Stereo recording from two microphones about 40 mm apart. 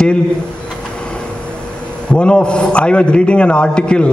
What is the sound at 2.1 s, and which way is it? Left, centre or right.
A man's voice, left.